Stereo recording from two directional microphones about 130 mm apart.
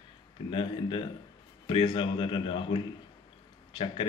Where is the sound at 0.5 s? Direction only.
40° left (ahead or behind).